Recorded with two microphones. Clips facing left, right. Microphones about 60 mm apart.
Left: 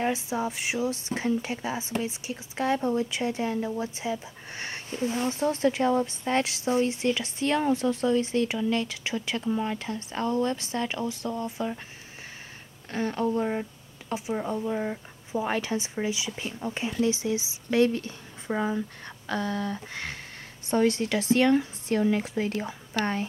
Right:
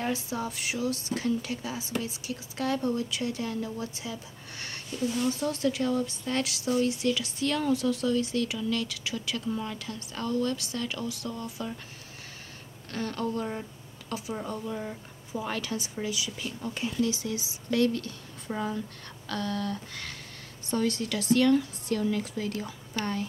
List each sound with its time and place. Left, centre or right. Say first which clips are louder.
0.0 s speech: left 4 dB; left
12.9 s a woman's voice: left 5 dB; left